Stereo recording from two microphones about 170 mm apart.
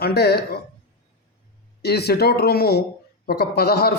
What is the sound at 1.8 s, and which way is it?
A man's voice, 70° left (ahead or behind).